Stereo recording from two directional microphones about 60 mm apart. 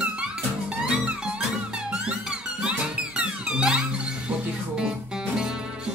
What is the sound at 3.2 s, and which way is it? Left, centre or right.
Music, centre.